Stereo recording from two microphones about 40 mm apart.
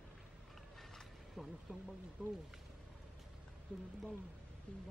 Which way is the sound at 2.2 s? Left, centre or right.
Right.